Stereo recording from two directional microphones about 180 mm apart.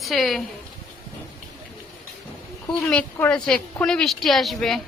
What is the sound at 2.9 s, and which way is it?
Speech, 5° left (ahead or behind).